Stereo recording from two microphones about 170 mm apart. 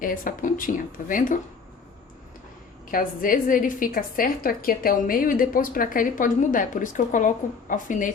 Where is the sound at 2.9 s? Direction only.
55° left (ahead or behind).